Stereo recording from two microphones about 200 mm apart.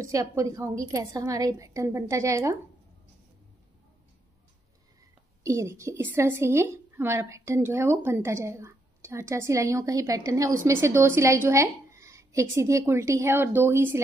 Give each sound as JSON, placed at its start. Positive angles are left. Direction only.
{"t": 0.0, "sound": "a woman's voice", "side_deg": -15}
{"t": 5.4, "sound": "a woman's voice", "side_deg": -15}